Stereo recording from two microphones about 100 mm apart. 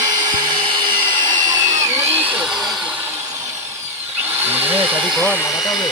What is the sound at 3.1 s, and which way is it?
Drill, 35° right (ahead or behind).